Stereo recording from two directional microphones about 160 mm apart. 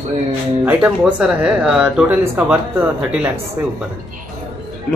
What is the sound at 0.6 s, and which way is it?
Speech, 10° right (ahead or behind).